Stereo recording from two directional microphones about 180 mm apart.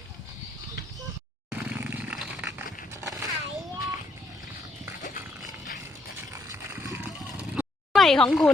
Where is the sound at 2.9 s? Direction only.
20° right (ahead or behind).